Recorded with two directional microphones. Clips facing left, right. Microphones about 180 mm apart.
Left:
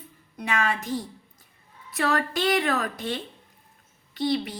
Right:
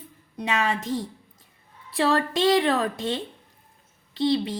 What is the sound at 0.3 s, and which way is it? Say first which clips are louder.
A woman's voice: right 1 dB; 25° right (ahead or behind).